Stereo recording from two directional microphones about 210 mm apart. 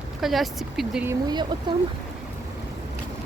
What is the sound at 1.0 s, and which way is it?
Speech, 20° right (ahead or behind).